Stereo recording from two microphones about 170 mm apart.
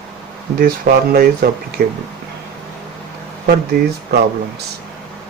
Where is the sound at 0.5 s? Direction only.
55° right (ahead or behind).